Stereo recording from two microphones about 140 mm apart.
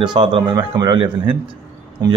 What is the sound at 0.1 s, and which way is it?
Speech, 35° right (ahead or behind).